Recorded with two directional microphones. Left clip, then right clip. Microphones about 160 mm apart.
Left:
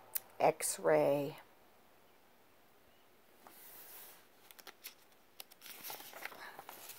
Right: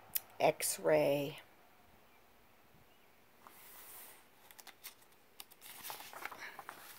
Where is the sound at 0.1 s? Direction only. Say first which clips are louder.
Left 1 dB; 5° left (ahead or behind).